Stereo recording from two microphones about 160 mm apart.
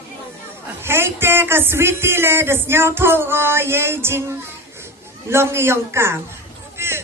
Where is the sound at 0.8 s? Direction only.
15° right (ahead or behind).